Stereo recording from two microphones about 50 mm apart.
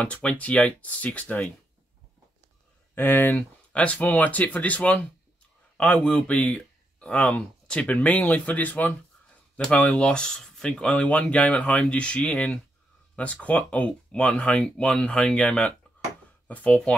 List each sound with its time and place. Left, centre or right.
0.0 s speech: left
2.9 s speech: left
3.7 s a man's voice: left